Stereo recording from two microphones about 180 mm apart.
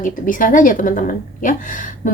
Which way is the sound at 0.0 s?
50° left (ahead or behind).